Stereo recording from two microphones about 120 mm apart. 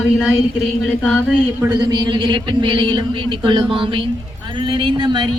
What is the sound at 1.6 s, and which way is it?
Speech, 35° right (ahead or behind).